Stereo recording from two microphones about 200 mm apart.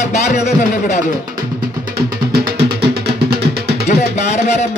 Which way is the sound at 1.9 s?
50° right (ahead or behind).